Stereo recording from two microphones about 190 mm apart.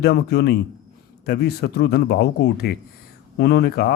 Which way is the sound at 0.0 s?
60° left (ahead or behind).